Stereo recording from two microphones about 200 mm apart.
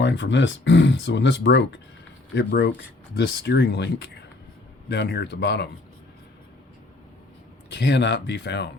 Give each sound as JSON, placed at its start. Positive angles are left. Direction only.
{"t": 0.0, "sound": "speech", "side_deg": 60}
{"t": 7.7, "sound": "speech", "side_deg": 60}